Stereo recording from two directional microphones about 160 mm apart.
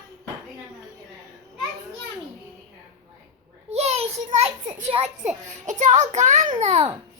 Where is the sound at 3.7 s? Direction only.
40° right (ahead or behind).